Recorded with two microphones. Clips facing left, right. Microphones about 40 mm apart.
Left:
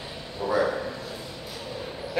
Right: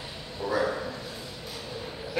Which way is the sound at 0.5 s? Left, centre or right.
Centre.